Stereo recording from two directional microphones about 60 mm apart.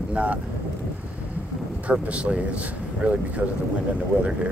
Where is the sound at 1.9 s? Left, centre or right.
Right.